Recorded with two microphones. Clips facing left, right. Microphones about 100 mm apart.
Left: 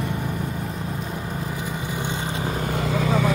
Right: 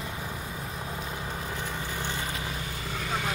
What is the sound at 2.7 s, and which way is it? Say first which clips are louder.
Vehicle: left 12 dB; 90° left.